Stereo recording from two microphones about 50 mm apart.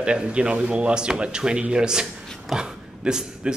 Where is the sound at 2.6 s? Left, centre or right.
Centre.